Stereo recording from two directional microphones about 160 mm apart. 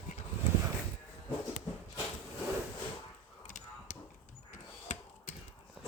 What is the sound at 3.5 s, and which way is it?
Tick-tock, 50° left (ahead or behind).